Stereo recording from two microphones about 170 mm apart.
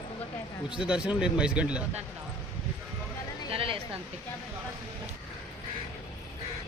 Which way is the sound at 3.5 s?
30° right (ahead or behind).